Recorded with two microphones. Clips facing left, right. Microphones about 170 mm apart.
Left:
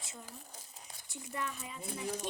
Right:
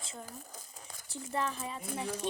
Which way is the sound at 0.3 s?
45° right (ahead or behind).